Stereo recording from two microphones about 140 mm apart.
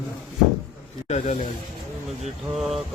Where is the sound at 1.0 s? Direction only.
50° left (ahead or behind).